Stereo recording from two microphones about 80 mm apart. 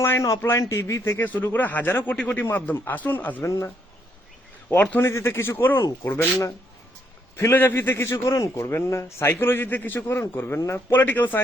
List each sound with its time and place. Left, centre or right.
0.0 s a man's voice: left
4.7 s a man's voice: left
5.0 s speech: left
5.8 s speech: left
7.5 s a man's voice: left
10.9 s a man's voice: left